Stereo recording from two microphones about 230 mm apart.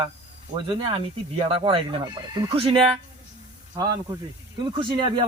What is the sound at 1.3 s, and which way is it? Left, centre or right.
A man's voice, right.